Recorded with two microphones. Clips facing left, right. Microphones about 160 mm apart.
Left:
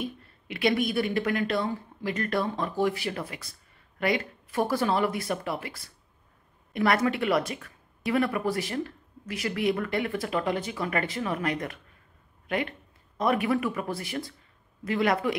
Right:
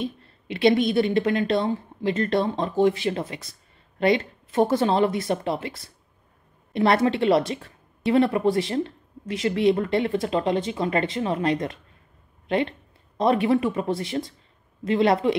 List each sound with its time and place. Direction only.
0.0 s a woman's voice: 25° right (ahead or behind)